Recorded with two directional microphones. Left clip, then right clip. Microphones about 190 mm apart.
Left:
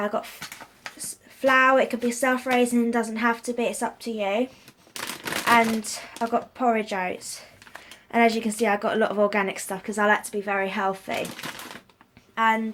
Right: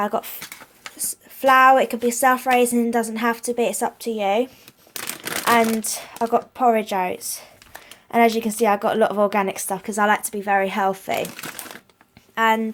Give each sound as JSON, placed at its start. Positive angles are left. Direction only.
{"t": 0.0, "sound": "speech", "side_deg": -50}
{"t": 5.5, "sound": "speech", "side_deg": -50}
{"t": 12.3, "sound": "speech", "side_deg": -50}